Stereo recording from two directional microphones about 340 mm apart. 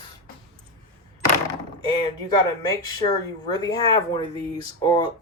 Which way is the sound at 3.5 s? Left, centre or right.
Centre.